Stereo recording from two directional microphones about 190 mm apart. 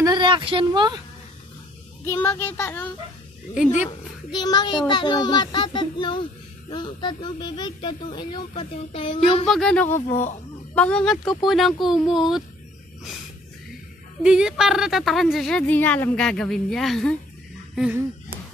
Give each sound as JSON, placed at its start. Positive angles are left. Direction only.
{"t": 0.0, "sound": "speech", "side_deg": -25}
{"t": 2.0, "sound": "speech", "side_deg": 10}
{"t": 3.6, "sound": "speech", "side_deg": 40}
{"t": 4.3, "sound": "speech", "side_deg": 20}
{"t": 9.5, "sound": "a woman's voice", "side_deg": 5}
{"t": 9.9, "sound": "speech", "side_deg": 40}
{"t": 10.7, "sound": "a woman's voice", "side_deg": 5}
{"t": 14.2, "sound": "a woman's voice", "side_deg": -5}